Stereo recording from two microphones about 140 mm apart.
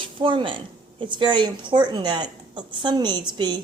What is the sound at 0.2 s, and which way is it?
A woman's voice, 35° right (ahead or behind).